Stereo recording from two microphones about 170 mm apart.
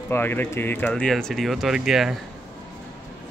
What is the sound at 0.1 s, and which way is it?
Speech, 10° left (ahead or behind).